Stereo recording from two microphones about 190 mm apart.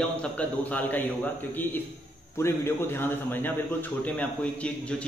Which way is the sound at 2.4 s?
10° left (ahead or behind).